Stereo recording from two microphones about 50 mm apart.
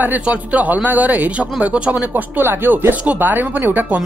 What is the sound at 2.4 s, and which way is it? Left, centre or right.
Speech, right.